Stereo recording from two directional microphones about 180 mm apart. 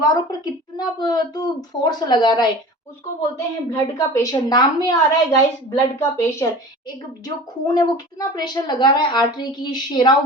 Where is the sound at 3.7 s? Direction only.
15° left (ahead or behind).